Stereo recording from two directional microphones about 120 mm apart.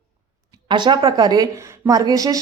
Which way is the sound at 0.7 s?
40° right (ahead or behind).